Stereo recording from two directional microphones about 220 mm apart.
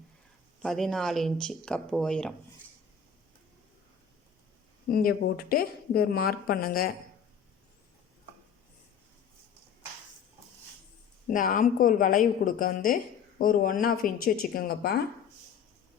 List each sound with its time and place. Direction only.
0.6 s speech: centre (ahead or behind)
4.9 s speech: 40° left (ahead or behind)
11.3 s a woman's voice: 35° left (ahead or behind)